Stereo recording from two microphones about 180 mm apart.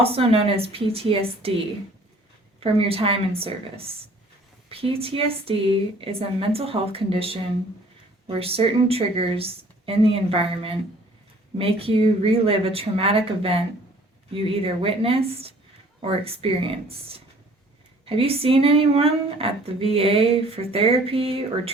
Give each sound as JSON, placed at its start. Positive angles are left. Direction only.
{"t": 0.0, "sound": "speech", "side_deg": -30}
{"t": 18.0, "sound": "speech", "side_deg": -30}